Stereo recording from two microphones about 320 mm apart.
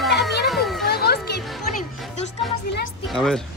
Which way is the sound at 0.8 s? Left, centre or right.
Left.